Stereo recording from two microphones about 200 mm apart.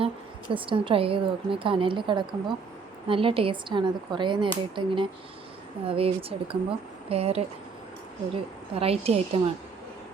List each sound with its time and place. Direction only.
0.5 s a woman's voice: 25° right (ahead or behind)